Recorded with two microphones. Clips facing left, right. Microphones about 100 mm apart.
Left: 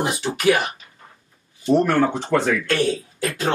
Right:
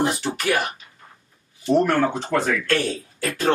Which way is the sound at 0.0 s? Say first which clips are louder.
Left 3 dB; 15° left (ahead or behind).